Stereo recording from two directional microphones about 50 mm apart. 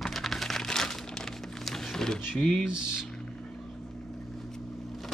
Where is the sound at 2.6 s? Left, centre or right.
Centre.